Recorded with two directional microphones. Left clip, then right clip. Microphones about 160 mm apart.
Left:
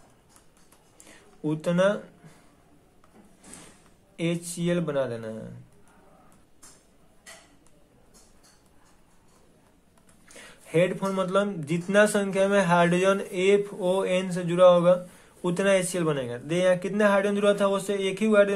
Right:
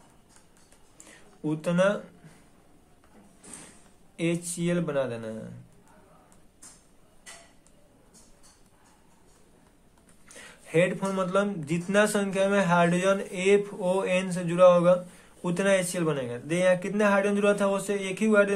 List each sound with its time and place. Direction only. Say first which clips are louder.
1.0 s a sound: left 2 dB; 20° left (ahead or behind)
4.2 s speech: even; 25° left (ahead or behind)
10.2 s speech: even; 20° left (ahead or behind)